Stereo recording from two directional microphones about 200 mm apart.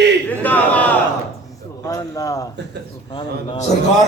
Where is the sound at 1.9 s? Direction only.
15° left (ahead or behind).